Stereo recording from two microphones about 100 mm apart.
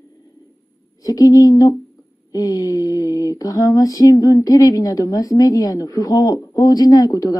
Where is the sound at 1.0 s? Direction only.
35° left (ahead or behind).